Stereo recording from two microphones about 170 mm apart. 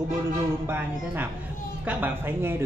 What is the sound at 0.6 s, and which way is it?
Speech, 10° right (ahead or behind).